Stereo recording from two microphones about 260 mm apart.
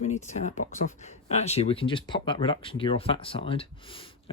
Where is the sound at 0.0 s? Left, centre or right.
Left.